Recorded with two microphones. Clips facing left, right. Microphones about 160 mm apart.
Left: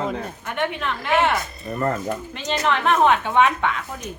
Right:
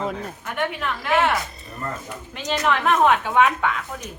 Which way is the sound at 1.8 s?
65° left (ahead or behind).